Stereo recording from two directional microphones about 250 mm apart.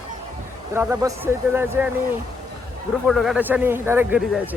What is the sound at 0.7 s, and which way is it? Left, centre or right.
Speech, centre.